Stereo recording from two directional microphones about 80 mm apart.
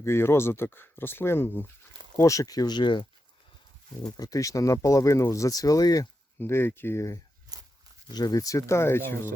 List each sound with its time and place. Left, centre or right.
0.0 s speech: left
2.1 s speech: left
4.2 s speech: left
6.4 s speech: left
7.5 s a sound: right
8.1 s speech: left